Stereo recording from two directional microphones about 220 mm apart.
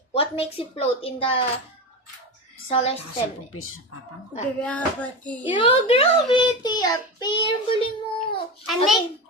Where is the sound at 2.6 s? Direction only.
30° left (ahead or behind).